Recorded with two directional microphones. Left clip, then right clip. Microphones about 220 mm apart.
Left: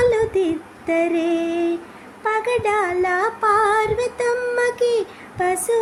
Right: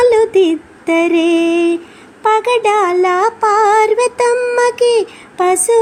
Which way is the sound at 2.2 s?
25° right (ahead or behind).